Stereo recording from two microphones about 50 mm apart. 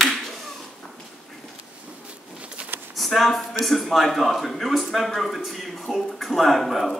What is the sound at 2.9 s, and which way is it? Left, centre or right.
A woman's voice, centre.